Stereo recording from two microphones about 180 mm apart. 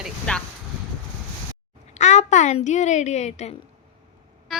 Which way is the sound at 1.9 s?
40° left (ahead or behind).